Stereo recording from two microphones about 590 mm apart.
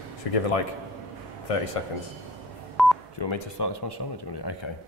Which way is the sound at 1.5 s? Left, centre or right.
Left.